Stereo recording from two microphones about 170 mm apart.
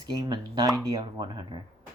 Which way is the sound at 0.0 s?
25° right (ahead or behind).